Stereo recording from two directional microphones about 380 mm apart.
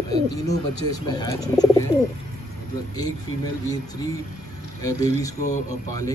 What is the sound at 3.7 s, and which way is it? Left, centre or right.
A man's voice, centre.